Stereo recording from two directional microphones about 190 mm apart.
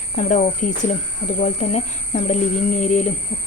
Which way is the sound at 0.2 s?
40° left (ahead or behind).